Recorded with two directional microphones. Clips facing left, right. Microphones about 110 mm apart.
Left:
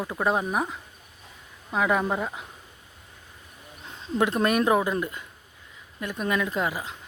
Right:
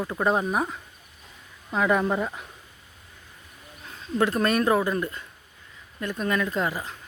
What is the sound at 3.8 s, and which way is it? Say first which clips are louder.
Bird: even; 25° left (ahead or behind).